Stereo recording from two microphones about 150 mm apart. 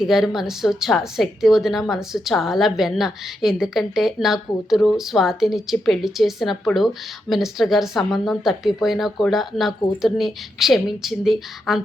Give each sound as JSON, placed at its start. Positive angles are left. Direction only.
{"t": 0.0, "sound": "a woman's voice", "side_deg": 0}